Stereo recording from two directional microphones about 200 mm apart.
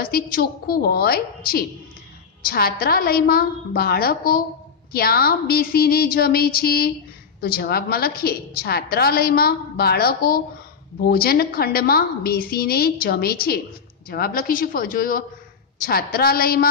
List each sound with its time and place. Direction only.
0.0 s a woman's voice: 50° left (ahead or behind)